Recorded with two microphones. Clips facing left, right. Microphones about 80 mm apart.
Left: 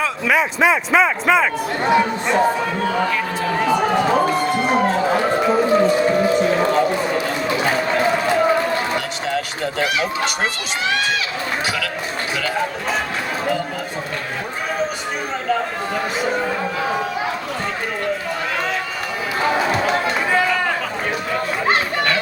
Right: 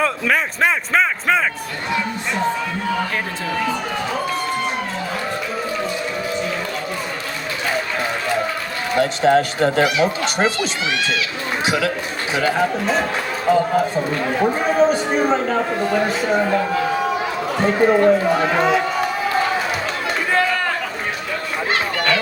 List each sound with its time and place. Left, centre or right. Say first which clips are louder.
0.0 s a man's voice: left 1 dB; centre
9.0 s speech: right 8 dB; right
18.5 s a man's voice: right 5 dB; centre